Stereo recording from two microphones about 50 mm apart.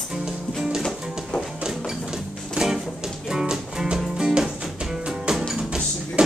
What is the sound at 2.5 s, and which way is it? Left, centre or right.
Music, centre.